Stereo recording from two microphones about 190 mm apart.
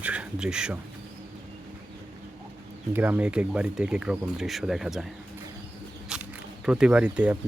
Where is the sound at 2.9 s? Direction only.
10° right (ahead or behind).